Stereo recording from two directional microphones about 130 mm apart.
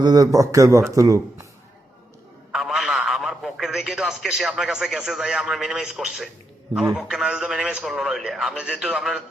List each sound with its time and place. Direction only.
0.0 s a man's voice: 30° right (ahead or behind)
2.5 s a man's voice: centre (ahead or behind)